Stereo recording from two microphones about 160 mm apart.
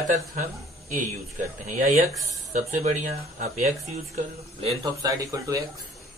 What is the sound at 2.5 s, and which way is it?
Speech, 50° right (ahead or behind).